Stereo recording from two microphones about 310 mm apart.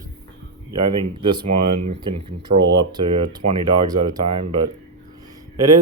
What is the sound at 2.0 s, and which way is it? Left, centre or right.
Speech, centre.